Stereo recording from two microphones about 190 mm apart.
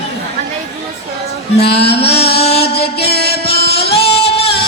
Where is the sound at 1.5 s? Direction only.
60° left (ahead or behind).